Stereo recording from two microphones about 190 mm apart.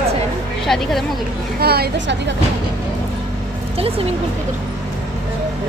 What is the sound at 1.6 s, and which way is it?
Speech, 55° right (ahead or behind).